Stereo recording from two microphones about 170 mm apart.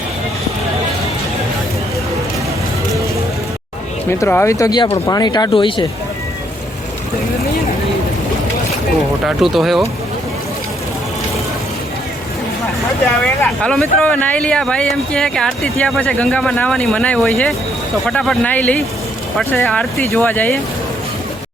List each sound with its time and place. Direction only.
4.1 s speech: 15° left (ahead or behind); by 5.8 s 30° left (ahead or behind)
9.2 s speech: centre (ahead or behind)
13.2 s speech: 5° left (ahead or behind)